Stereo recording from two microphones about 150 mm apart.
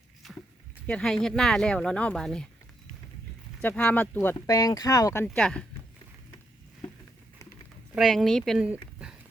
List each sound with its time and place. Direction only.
0.2 s a sound: centre (ahead or behind)
0.9 s speech: 5° left (ahead or behind)
3.6 s speech: 10° left (ahead or behind)
4.4 s speech: 25° left (ahead or behind)
5.4 s speech: 5° left (ahead or behind)
7.9 s speech: centre (ahead or behind)